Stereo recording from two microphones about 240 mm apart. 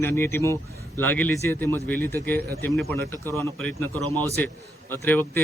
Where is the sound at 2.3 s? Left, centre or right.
Right.